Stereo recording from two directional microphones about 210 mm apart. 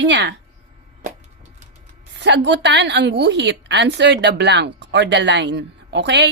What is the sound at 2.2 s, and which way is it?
A woman's voice, 55° right (ahead or behind).